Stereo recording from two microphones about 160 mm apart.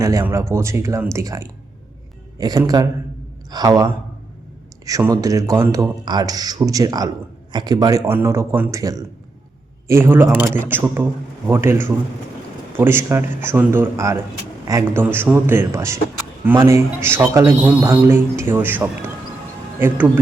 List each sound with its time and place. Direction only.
0.0 s a man's voice: 20° right (ahead or behind)